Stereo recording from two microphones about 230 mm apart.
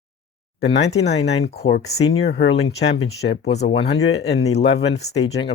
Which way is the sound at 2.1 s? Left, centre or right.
Left.